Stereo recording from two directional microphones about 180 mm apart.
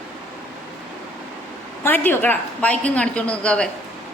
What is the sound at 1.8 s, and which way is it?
A woman's voice, 10° left (ahead or behind).